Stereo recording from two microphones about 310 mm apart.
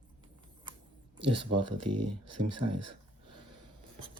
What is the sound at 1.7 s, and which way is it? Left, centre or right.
Speech, right.